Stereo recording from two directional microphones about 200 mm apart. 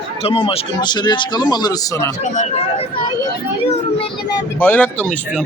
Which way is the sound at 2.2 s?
35° left (ahead or behind).